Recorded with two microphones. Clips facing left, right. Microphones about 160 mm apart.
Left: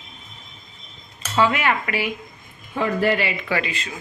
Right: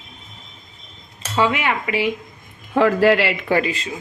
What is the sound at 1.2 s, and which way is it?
Cutlery, 15° right (ahead or behind).